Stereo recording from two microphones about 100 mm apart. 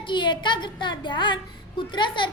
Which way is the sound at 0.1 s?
50° left (ahead or behind).